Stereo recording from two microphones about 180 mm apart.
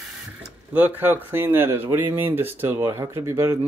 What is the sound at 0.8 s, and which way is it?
Speech, 10° right (ahead or behind).